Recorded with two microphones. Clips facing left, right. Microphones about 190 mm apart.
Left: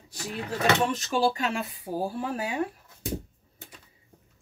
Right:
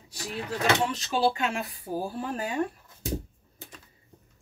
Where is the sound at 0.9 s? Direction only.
45° left (ahead or behind).